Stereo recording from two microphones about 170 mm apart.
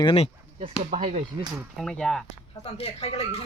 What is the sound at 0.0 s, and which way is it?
Speech, 30° left (ahead or behind).